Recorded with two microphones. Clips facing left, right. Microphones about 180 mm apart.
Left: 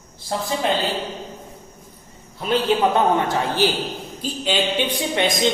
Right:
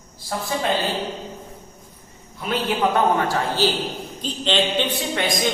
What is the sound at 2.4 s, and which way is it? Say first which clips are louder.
A man's voice: left 3 dB; 25° left (ahead or behind).